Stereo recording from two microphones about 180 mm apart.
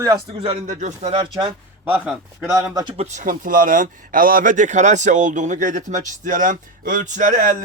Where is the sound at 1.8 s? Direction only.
10° right (ahead or behind).